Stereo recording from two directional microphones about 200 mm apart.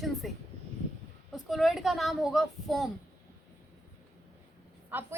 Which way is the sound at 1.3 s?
Centre (ahead or behind).